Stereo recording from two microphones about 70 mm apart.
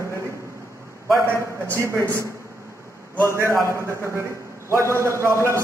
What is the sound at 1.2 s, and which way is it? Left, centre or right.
Speech, right.